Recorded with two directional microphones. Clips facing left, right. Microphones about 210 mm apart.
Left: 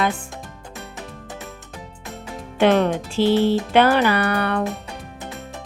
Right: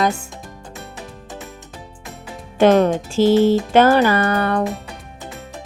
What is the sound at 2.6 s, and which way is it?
Speech, 45° right (ahead or behind).